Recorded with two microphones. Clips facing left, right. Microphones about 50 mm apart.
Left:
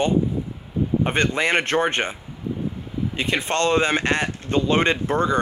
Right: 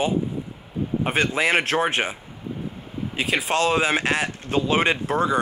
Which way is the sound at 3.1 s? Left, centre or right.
Centre.